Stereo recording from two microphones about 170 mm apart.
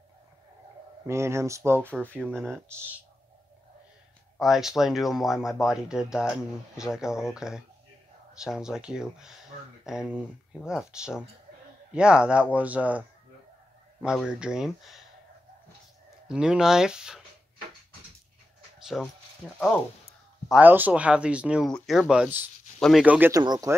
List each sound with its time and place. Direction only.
1.0 s speech: 15° right (ahead or behind)
1.9 s speech: 10° left (ahead or behind)
4.4 s speech: centre (ahead or behind)
14.0 s speech: 5° right (ahead or behind)
16.3 s speech: 5° right (ahead or behind)
18.9 s speech: 5° left (ahead or behind)
22.8 s speech: centre (ahead or behind)
23.0 s speech: 10° right (ahead or behind)
23.3 s speech: 20° right (ahead or behind)